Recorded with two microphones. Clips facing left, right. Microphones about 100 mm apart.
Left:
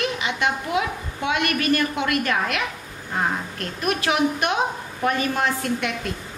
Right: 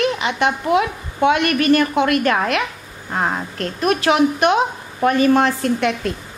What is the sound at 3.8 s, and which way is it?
A woman's voice, 90° right.